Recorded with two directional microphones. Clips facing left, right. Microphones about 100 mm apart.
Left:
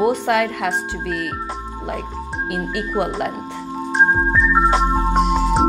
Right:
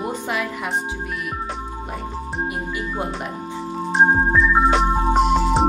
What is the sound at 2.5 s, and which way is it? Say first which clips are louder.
Speech: left 4 dB; 75° left (ahead or behind).